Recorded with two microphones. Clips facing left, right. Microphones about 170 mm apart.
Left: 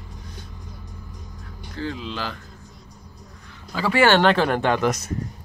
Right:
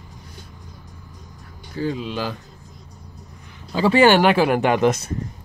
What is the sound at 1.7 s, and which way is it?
Speech, 10° right (ahead or behind).